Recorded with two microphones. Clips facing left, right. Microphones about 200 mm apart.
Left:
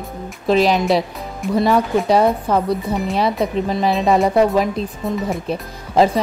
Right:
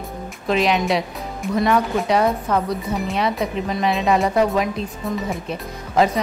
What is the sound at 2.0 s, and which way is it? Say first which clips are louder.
Speech: left 3 dB; 35° left (ahead or behind).